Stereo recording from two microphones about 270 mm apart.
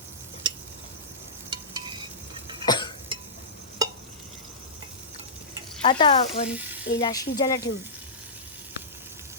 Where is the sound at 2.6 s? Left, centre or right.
Centre.